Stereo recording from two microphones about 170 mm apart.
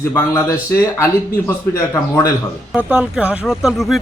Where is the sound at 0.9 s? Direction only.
20° left (ahead or behind).